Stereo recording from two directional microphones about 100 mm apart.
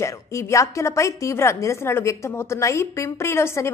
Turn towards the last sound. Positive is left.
turn(degrees=25)  # may be behind; listen again after turning